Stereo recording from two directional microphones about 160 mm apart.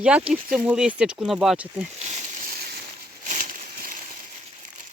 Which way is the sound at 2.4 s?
70° right (ahead or behind).